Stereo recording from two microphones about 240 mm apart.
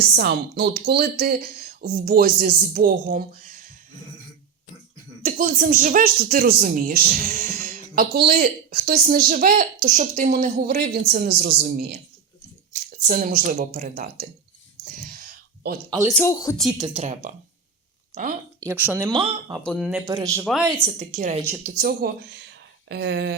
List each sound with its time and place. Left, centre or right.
0.2 s speech: right
5.2 s speech: right
14.8 s a sound: right
16.0 s speech: centre
16.7 s speech: right
18.6 s speech: centre
19.6 s speech: centre
20.1 s speech: centre
20.8 s speech: right
22.9 s speech: right